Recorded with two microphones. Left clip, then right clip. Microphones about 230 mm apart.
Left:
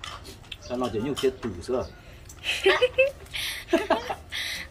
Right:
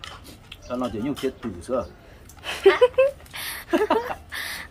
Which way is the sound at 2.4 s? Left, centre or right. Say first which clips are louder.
Right 4 dB; right.